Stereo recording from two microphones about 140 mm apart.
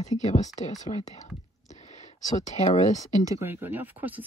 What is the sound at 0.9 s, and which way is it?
Speech, 50° left (ahead or behind).